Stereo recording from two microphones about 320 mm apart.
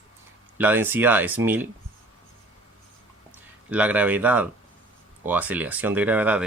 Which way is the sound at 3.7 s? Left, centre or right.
Centre.